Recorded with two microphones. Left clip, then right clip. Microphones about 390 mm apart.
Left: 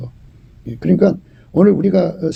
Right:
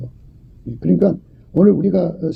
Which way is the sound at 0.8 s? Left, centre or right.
Left.